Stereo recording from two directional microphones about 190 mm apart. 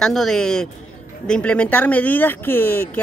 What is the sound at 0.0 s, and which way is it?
A man's voice, centre (ahead or behind).